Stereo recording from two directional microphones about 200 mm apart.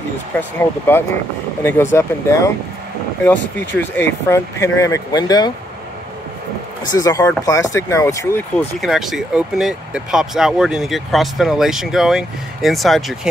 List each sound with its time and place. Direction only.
0.4 s speech: 10° left (ahead or behind)
6.9 s speech: 15° left (ahead or behind)
8.8 s speech: centre (ahead or behind)